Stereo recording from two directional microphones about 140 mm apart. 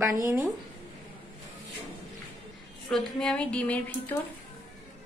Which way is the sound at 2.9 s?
5° left (ahead or behind).